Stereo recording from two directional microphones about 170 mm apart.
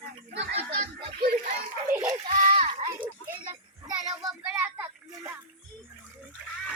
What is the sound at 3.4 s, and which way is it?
Child singing, 30° right (ahead or behind).